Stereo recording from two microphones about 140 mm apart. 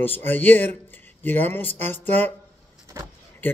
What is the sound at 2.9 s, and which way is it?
Speech, 20° right (ahead or behind).